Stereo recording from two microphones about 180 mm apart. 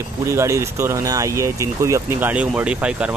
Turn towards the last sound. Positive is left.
turn(degrees=-5)  # may be behind; listen again after turning